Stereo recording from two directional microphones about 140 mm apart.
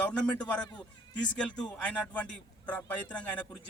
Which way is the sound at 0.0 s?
10° left (ahead or behind).